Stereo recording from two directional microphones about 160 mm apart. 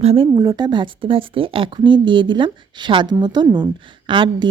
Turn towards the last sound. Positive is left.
turn(degrees=-30)  # may be behind; listen again after turning